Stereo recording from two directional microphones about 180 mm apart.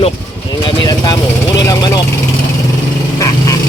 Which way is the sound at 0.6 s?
25° left (ahead or behind).